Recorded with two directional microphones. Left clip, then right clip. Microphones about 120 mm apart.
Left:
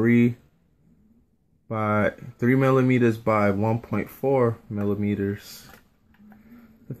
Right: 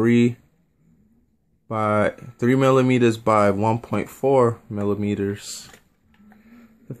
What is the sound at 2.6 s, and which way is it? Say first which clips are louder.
Speech: right 4 dB; 10° right (ahead or behind).